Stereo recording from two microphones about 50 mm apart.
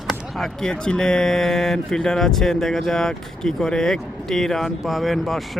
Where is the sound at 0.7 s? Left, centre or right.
Centre.